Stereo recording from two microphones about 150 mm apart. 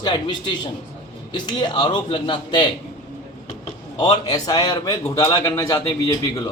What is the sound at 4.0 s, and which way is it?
A man's voice, 25° left (ahead or behind).